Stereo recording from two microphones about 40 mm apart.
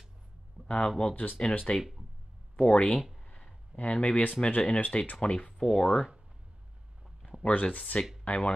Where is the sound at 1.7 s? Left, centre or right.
Left.